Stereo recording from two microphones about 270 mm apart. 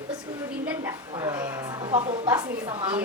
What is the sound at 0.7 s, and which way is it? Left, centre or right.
Mantra, centre.